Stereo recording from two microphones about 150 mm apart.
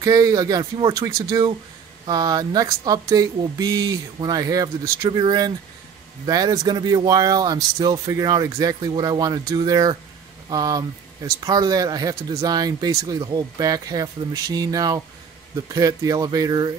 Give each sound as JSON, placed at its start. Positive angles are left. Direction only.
{"t": 0.0, "sound": "speech", "side_deg": -25}